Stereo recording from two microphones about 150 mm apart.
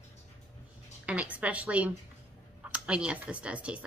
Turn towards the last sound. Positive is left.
turn(degrees=-10)  # may be behind; listen again after turning